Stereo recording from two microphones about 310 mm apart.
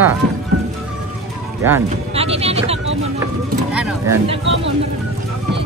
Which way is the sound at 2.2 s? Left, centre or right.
Centre.